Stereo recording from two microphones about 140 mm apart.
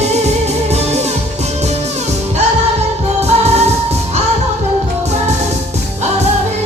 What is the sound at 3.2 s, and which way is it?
Music, 50° right (ahead or behind).